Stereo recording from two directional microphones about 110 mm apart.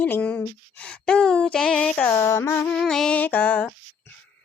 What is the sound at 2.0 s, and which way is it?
Female singing, 20° left (ahead or behind).